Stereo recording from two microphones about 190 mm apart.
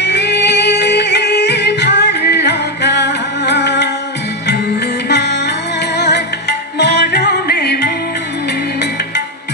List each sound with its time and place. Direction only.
0.0 s music: 65° left (ahead or behind)